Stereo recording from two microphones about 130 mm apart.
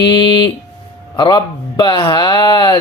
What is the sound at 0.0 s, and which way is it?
A man's voice, 35° left (ahead or behind).